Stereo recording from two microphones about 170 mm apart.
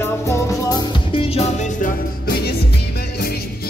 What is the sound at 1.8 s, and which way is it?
Music, 65° left (ahead or behind).